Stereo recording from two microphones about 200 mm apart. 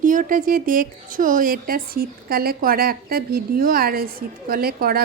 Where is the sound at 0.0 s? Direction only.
40° right (ahead or behind).